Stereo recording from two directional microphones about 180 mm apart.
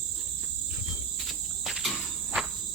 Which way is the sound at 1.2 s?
Centre (ahead or behind).